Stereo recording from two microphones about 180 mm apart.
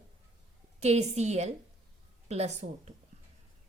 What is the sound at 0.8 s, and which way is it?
A woman's voice, 40° right (ahead or behind).